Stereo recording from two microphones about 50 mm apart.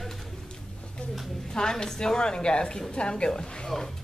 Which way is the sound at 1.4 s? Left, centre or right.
Centre.